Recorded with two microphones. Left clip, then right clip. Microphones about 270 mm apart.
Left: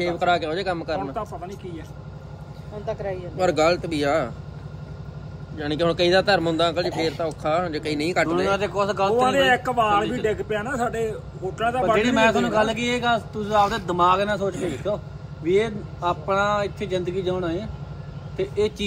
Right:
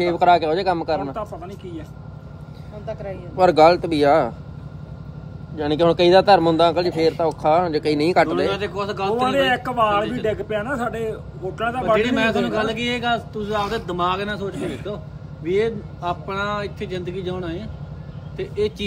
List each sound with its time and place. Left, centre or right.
0.0 s speech: centre
1.1 s a man's voice: centre
2.9 s speech: left
3.3 s speech: centre
5.6 s speech: centre
8.5 s speech: centre
9.1 s a man's voice: centre
11.8 s speech: centre